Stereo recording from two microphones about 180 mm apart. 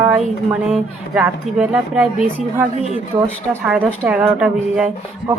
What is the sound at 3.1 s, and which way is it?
Speech, 25° right (ahead or behind).